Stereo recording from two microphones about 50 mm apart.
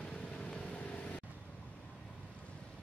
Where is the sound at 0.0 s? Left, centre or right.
Centre.